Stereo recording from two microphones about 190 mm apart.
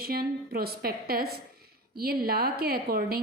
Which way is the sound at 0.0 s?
55° right (ahead or behind).